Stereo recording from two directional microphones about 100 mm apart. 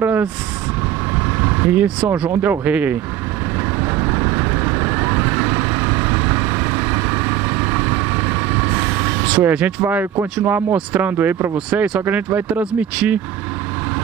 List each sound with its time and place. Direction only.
0.0 s vehicle: 20° right (ahead or behind)
1.4 s speech: 15° right (ahead or behind)
4.0 s vehicle: 25° right (ahead or behind)
9.2 s speech: 15° right (ahead or behind)